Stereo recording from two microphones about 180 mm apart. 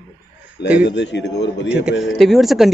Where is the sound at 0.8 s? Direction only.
70° left (ahead or behind).